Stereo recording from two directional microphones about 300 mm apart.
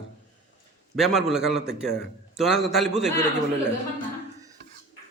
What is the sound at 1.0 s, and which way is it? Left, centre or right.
A man's voice, centre.